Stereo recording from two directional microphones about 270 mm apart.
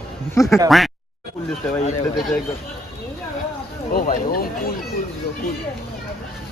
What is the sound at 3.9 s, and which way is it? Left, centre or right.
Speech, left.